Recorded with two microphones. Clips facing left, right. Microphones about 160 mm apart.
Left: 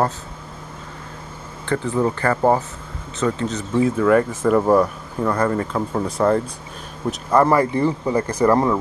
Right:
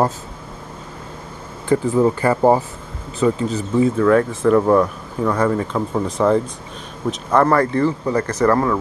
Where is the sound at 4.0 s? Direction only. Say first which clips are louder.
Right 1 dB; 5° left (ahead or behind).